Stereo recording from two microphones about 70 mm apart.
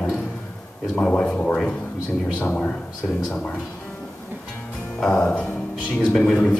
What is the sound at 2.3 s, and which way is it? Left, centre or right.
Speech, left.